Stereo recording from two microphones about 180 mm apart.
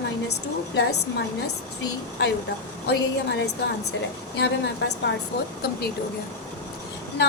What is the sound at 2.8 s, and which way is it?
A woman's voice, 65° left (ahead or behind).